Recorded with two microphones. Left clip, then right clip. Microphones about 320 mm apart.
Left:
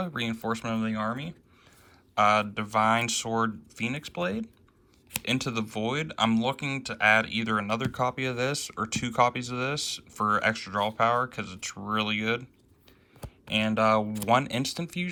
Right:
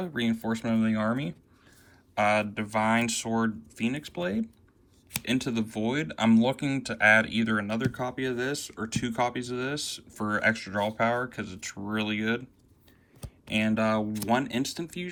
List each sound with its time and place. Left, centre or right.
0.0 s speech: centre
13.5 s speech: centre